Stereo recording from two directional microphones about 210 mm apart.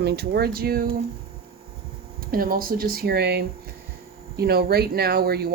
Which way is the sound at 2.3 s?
45° right (ahead or behind).